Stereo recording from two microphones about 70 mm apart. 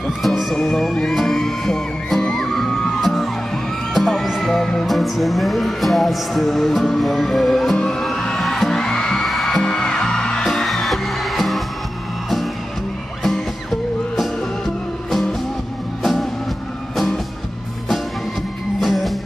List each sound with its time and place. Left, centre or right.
0.2 s music: centre
15.0 s music: centre
18.8 s music: centre